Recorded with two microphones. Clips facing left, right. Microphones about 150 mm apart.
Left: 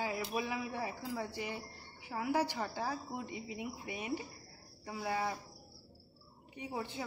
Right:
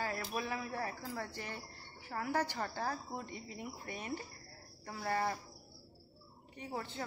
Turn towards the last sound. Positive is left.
turn(degrees=15)  # may be behind; listen again after turning